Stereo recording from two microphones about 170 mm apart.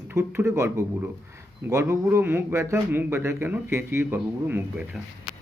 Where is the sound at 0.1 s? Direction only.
15° right (ahead or behind).